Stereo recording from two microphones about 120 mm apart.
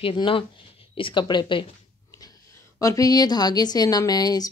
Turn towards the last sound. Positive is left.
turn(degrees=35)  # may be behind; listen again after turning